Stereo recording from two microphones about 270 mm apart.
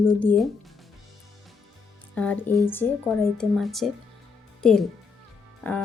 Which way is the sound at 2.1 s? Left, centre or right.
Centre.